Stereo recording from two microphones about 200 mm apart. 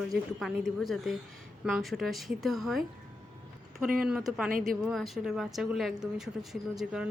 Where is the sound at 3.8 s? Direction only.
45° right (ahead or behind).